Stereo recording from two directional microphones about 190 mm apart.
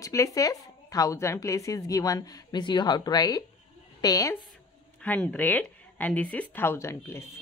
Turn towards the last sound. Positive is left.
turn(degrees=15)  # may be behind; listen again after turning